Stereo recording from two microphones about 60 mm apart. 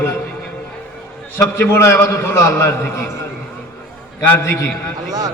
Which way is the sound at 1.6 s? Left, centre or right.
Left.